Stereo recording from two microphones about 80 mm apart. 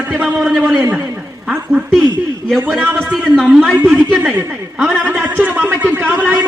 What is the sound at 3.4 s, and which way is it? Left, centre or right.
Speech, centre.